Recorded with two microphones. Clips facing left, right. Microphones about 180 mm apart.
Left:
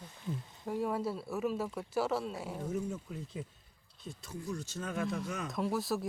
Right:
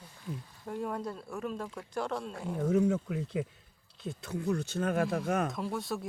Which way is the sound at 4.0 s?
65° right (ahead or behind).